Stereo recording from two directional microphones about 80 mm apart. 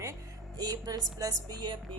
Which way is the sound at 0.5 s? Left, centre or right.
Right.